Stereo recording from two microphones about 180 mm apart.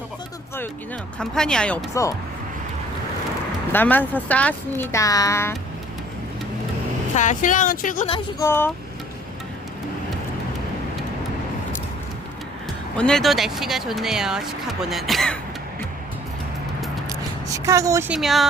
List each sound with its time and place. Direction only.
1.2 s speech: 5° left (ahead or behind)
3.7 s speech: 10° left (ahead or behind)
7.2 s speech: 45° left (ahead or behind)
8.4 s speech: 10° left (ahead or behind)
13.0 s speech: 5° left (ahead or behind)
17.1 s a sound: 20° right (ahead or behind)
18.1 s speech: centre (ahead or behind)